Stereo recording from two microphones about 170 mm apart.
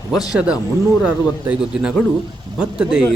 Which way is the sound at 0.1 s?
5° right (ahead or behind).